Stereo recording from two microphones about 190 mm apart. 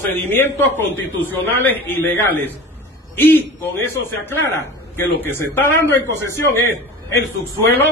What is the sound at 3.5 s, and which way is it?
A man's voice, 10° left (ahead or behind).